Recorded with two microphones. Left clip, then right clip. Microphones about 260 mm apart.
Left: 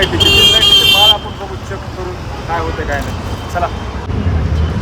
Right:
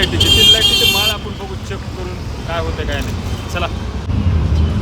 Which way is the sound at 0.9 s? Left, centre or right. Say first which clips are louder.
Left 8 dB; centre.